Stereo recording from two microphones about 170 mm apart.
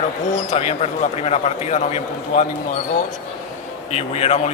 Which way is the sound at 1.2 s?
40° left (ahead or behind).